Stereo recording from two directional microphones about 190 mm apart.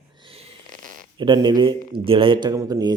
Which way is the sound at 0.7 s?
45° right (ahead or behind).